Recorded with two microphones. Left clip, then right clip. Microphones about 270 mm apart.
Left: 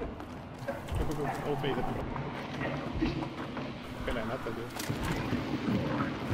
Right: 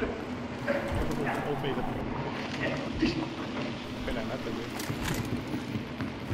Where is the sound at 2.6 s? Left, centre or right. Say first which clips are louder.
Right 4 dB; centre.